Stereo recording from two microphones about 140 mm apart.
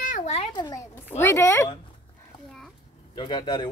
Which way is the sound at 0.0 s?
70° left (ahead or behind).